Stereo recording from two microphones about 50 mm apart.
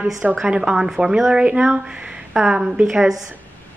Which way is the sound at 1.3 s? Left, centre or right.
Right.